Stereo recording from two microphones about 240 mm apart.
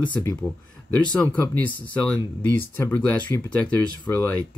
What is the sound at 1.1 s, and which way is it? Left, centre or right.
Speech, centre.